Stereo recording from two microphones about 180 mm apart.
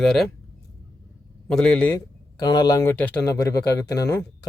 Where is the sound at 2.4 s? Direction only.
20° left (ahead or behind).